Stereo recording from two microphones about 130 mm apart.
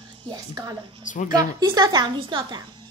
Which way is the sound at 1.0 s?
75° left (ahead or behind).